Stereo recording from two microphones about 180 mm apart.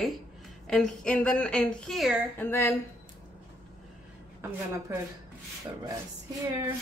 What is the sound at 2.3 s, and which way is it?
Speech, 15° left (ahead or behind).